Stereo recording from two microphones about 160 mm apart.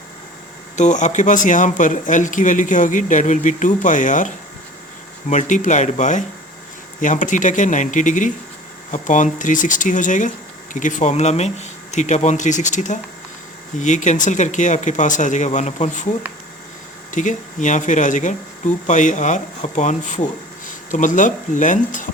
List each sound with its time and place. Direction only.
0.8 s speech: 50° left (ahead or behind)
5.3 s speech: 50° left (ahead or behind)
17.1 s speech: 50° left (ahead or behind)